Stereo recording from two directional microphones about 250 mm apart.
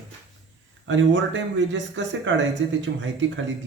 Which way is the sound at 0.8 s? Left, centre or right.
Right.